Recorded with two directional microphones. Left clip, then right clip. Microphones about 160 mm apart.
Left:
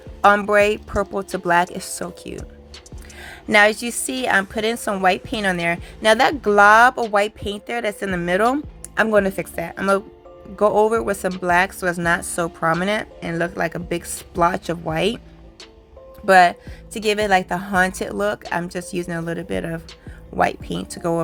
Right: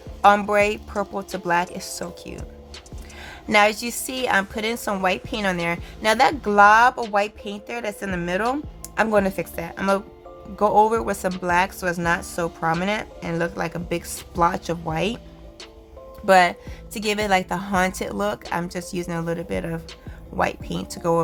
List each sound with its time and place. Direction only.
0.2 s a woman's voice: 15° left (ahead or behind)
16.2 s a woman's voice: 5° left (ahead or behind)